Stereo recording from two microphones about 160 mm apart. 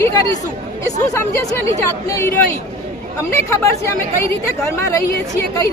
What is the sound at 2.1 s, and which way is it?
A woman's voice, 20° left (ahead or behind).